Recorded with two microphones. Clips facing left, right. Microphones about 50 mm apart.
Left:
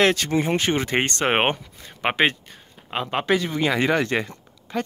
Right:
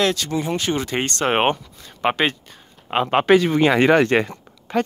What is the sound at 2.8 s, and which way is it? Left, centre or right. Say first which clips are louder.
Speech: right 7 dB; right.